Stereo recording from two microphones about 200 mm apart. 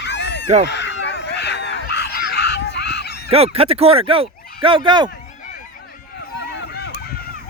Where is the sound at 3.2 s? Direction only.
30° right (ahead or behind).